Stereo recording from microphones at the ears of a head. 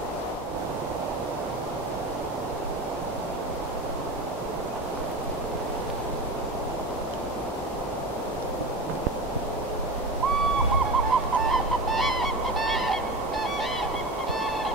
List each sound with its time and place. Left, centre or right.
10.2 s owl: right